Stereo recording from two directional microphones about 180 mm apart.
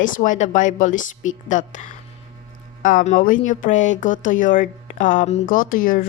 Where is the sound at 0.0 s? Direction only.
45° left (ahead or behind).